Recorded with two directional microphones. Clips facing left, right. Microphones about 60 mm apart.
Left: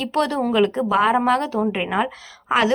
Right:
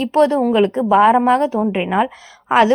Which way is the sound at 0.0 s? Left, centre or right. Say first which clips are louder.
Right 7 dB; right.